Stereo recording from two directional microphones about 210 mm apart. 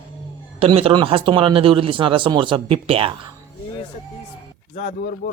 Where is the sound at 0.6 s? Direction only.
30° right (ahead or behind).